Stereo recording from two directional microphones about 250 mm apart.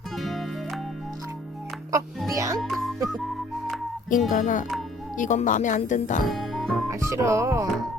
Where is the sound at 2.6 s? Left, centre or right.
Centre.